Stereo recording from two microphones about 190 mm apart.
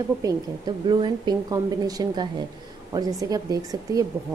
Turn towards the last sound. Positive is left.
turn(degrees=-20)  # may be behind; listen again after turning